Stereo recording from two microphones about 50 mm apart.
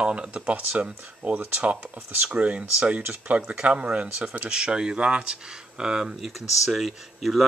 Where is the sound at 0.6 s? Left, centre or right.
Right; by 6.3 s centre.